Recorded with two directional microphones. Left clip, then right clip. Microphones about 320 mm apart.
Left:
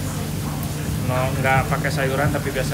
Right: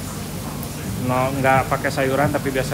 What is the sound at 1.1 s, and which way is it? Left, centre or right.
Speech, centre.